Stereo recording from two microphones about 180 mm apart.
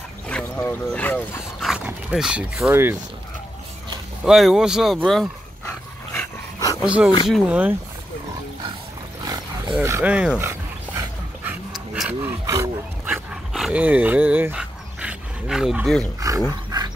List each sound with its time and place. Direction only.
0.3 s speech: 10° left (ahead or behind)
1.7 s speech: 5° right (ahead or behind)
4.2 s speech: centre (ahead or behind)
5.7 s dog: 15° left (ahead or behind)
6.8 s speech: 5° right (ahead or behind)
9.2 s a sound: 20° right (ahead or behind)
9.8 s speech: 10° right (ahead or behind)
11.9 s dog: 10° right (ahead or behind)
16.2 s dog: 20° right (ahead or behind)